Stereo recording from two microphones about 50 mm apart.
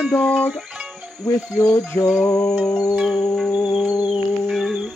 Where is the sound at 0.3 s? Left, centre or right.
Centre.